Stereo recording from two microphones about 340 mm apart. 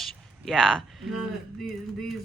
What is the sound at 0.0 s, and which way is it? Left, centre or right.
Speech, centre.